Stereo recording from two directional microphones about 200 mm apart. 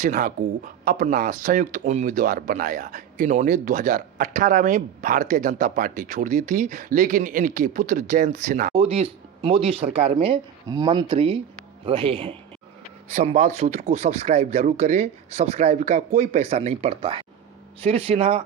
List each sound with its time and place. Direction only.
0.0 s speech: 40° right (ahead or behind)
8.7 s speech: 30° right (ahead or behind)